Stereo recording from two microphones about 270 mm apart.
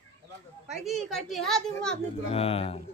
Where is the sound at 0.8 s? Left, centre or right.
Centre.